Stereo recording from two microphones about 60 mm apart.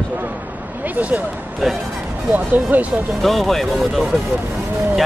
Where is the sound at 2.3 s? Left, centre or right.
Right.